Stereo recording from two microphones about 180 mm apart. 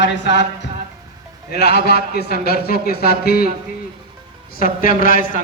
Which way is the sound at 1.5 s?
65° left (ahead or behind).